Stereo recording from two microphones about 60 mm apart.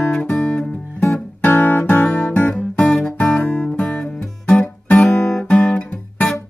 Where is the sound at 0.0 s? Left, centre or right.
Centre.